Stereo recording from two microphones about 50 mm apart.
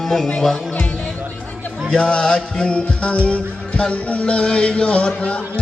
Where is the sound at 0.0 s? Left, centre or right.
Centre.